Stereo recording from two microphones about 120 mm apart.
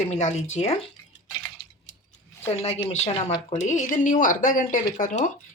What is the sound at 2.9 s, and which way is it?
Speech, 60° left (ahead or behind).